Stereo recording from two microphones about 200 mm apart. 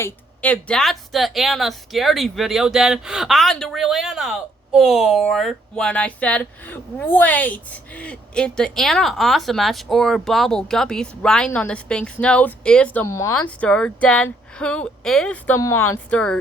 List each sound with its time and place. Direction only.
0.0 s a woman's voice: 5° left (ahead or behind)